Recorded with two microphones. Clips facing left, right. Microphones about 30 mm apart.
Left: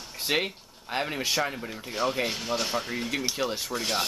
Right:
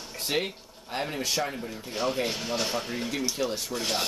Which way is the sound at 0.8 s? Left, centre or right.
Centre.